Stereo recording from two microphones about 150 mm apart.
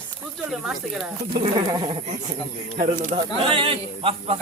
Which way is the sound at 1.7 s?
30° right (ahead or behind).